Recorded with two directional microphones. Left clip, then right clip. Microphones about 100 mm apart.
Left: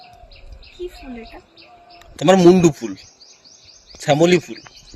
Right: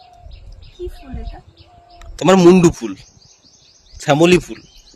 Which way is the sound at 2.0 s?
80° right.